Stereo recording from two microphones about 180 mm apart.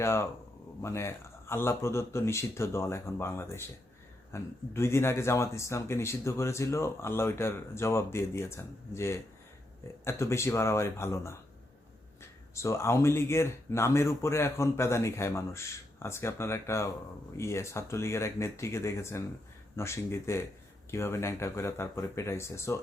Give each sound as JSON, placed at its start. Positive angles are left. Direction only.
{"t": 0.0, "sound": "speech", "side_deg": 15}
{"t": 12.5, "sound": "speech", "side_deg": 15}